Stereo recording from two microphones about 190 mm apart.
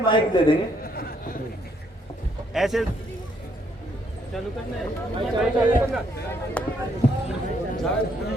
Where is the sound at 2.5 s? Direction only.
Centre (ahead or behind).